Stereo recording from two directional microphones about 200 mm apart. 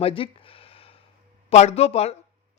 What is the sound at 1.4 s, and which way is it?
Speech, 30° left (ahead or behind).